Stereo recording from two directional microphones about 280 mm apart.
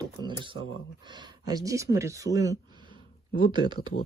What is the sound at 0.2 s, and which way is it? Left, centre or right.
Speech, centre.